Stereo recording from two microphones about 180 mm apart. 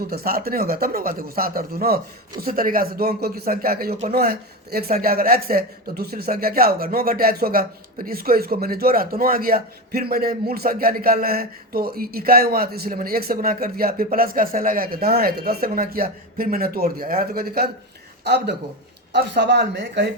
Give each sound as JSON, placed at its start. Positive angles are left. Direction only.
{"t": 0.0, "sound": "a woman's voice", "side_deg": -55}